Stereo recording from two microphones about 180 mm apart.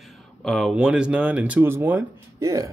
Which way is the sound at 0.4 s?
Centre (ahead or behind).